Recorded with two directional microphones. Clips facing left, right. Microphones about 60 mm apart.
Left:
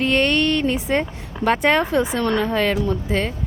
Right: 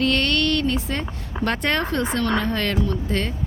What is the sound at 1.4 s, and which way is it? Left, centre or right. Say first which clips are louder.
A woman's voice: left 5 dB; centre.